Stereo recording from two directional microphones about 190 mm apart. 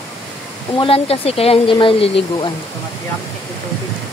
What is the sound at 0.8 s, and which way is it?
Speech, 30° left (ahead or behind).